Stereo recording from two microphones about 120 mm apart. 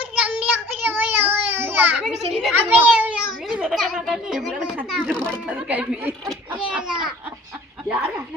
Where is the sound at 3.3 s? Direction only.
Centre (ahead or behind).